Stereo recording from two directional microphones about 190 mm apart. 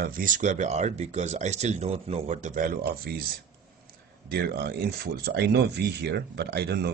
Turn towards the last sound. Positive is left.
turn(degrees=-60)  # may be behind; listen again after turning